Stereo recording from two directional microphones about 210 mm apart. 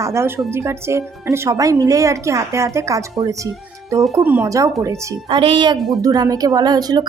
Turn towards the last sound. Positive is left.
turn(degrees=-20)  # may be behind; listen again after turning